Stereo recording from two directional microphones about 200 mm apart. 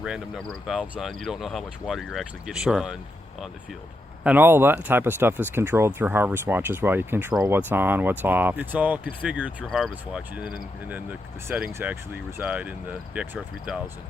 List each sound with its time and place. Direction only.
0.0 s speech: 5° right (ahead or behind)
4.2 s speech: 10° right (ahead or behind)